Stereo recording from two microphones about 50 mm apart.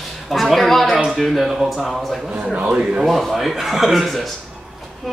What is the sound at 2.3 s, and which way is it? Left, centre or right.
Speech, right.